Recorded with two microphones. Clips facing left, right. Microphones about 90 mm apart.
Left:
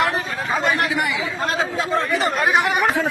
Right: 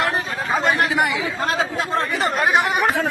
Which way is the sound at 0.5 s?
30° right (ahead or behind).